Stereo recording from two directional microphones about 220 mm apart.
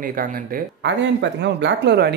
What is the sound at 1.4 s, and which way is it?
Speech, 50° right (ahead or behind).